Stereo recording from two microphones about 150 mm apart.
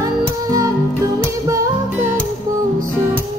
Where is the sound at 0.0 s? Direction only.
25° right (ahead or behind).